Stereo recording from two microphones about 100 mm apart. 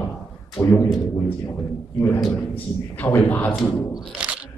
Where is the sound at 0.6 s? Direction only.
25° left (ahead or behind).